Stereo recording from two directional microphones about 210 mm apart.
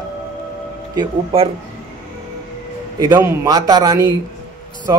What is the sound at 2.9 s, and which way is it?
Speech, 10° right (ahead or behind).